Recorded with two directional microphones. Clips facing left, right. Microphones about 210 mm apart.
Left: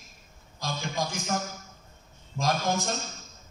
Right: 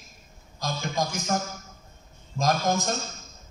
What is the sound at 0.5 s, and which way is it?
Speech, 40° right (ahead or behind).